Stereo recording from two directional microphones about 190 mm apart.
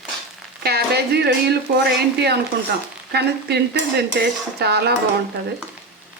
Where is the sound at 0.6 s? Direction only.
55° right (ahead or behind).